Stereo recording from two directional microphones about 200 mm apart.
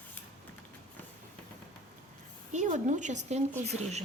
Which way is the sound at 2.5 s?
35° right (ahead or behind).